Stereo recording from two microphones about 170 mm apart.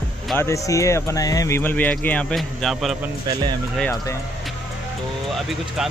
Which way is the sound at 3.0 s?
20° right (ahead or behind).